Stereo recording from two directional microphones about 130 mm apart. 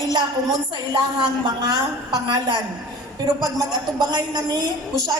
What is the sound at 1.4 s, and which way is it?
A man's voice, 30° right (ahead or behind).